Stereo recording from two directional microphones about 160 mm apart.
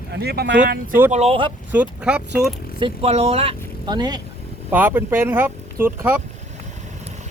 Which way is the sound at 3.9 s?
25° right (ahead or behind).